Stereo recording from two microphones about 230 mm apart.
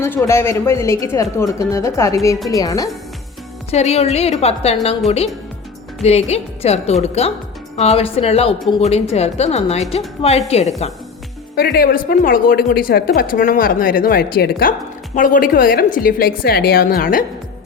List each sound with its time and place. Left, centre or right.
0.0 s speech: centre
3.7 s a woman's voice: left
11.5 s speech: left